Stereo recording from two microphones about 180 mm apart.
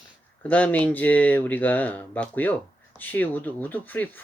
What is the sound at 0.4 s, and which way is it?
Speech, 10° left (ahead or behind).